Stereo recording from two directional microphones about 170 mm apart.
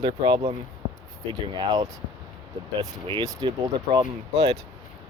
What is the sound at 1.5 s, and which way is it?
Speech, 25° right (ahead or behind).